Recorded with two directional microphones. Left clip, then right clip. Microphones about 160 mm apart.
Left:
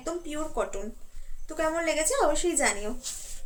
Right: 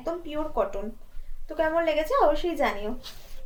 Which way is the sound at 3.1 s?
20° right (ahead or behind).